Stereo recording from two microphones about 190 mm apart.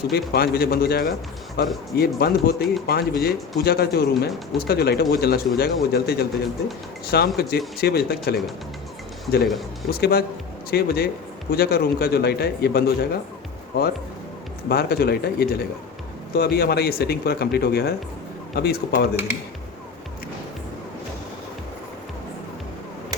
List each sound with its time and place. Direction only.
0.1 s speech: 55° left (ahead or behind)
9.9 s speech: 55° left (ahead or behind)